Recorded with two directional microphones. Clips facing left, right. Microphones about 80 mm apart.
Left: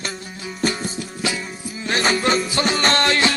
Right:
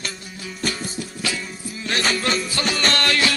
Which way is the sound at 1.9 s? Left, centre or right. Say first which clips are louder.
Left 3 dB; left.